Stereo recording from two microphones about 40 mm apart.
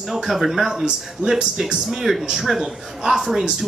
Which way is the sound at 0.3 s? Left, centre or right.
Centre.